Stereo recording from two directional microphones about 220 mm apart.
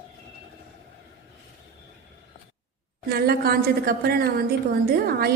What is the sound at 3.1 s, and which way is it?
A woman's voice, 45° right (ahead or behind).